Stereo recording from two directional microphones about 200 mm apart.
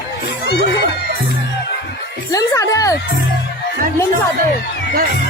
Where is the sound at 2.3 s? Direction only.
15° left (ahead or behind).